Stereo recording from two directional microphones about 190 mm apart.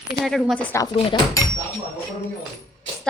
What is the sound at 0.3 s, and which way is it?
Speech, centre (ahead or behind).